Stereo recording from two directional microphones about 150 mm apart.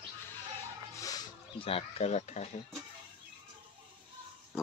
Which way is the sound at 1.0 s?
25° left (ahead or behind).